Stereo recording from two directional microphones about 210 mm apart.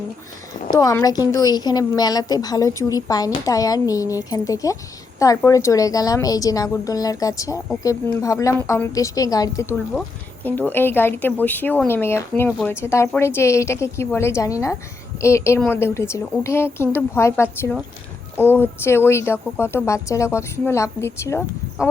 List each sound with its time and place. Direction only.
0.7 s a woman's voice: 15° left (ahead or behind)